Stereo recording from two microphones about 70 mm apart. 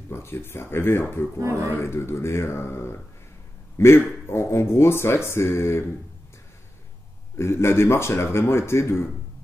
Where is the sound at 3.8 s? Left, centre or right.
Left.